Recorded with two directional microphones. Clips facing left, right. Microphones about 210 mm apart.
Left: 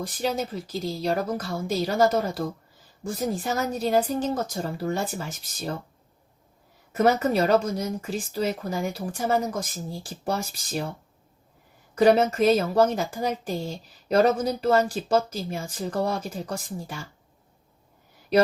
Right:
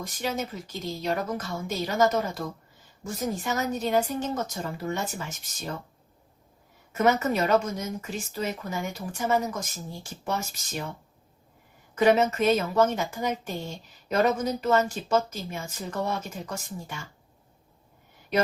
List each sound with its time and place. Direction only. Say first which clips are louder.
0.0 s a woman's voice: left 3 dB; 35° left (ahead or behind)
6.9 s a woman's voice: left 2 dB; 35° left (ahead or behind)
11.9 s a woman's voice: left 3 dB; 35° left (ahead or behind)